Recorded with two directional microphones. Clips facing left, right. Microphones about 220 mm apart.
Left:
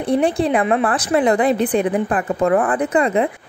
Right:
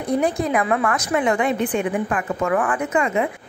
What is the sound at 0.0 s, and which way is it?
A woman's voice, 30° left (ahead or behind).